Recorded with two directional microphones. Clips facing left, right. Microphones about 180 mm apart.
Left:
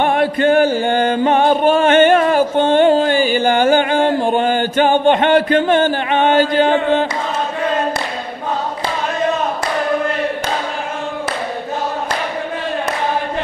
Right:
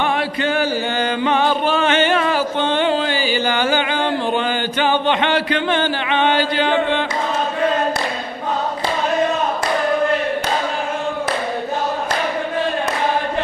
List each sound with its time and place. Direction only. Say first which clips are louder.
0.0 s music: left 5 dB; 50° left (ahead or behind)